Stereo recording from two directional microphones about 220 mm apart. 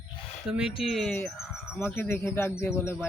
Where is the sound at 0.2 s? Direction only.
30° left (ahead or behind).